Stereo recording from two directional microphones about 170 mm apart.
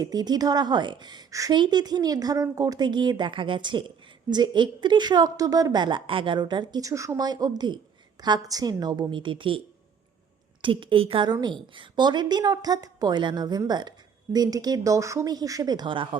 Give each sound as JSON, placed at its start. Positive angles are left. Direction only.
{"t": 0.0, "sound": "a woman's voice", "side_deg": -25}
{"t": 10.6, "sound": "a woman's voice", "side_deg": -30}